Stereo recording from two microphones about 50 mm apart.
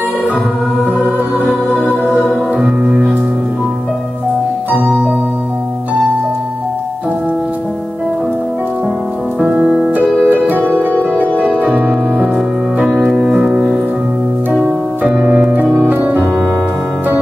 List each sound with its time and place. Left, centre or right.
1.7 s music: centre
4.6 s music: right
9.4 s music: centre
10.2 s harp: right
11.6 s music: right
13.0 s music: centre
15.2 s keyboard: right
15.5 s piano: right
15.9 s keyboard: right